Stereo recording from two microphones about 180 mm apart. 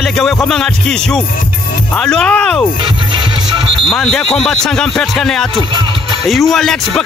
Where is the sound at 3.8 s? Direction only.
Centre (ahead or behind).